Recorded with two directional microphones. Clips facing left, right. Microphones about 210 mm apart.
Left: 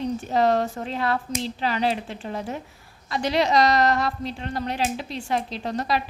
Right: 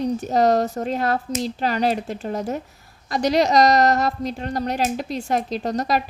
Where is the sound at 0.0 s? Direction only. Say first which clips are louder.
Right 3 dB; 40° right (ahead or behind).